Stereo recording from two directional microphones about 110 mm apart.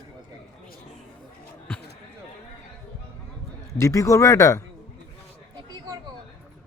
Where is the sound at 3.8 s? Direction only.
30° left (ahead or behind).